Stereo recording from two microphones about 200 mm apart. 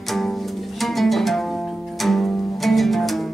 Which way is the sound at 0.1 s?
Centre (ahead or behind).